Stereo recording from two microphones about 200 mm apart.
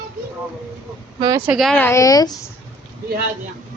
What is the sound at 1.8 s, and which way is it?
Speech, 15° left (ahead or behind).